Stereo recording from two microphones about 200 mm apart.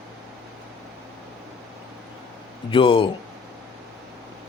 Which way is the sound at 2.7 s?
25° left (ahead or behind).